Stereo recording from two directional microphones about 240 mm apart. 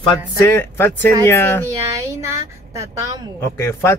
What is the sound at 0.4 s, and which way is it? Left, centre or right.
Speech, centre.